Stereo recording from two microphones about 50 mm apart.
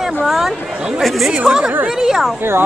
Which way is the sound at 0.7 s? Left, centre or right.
Centre.